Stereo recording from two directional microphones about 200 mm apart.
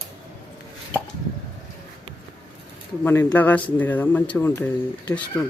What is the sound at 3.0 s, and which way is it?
Speech, 10° left (ahead or behind).